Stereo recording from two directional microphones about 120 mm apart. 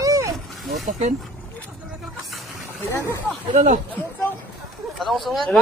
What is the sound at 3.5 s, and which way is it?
Speech, 75° right (ahead or behind).